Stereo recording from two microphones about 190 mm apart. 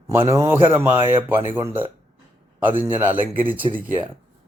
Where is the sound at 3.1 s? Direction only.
30° right (ahead or behind).